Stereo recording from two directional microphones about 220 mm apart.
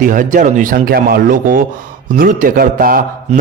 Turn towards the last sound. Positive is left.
turn(degrees=-40)  # may be behind; listen again after turning